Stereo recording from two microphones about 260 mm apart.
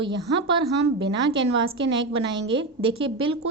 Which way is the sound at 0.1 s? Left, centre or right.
Right.